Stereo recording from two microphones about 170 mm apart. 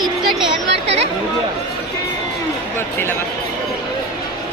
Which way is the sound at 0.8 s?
40° right (ahead or behind).